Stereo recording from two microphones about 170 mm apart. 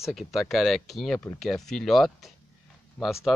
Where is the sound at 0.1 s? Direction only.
Centre (ahead or behind).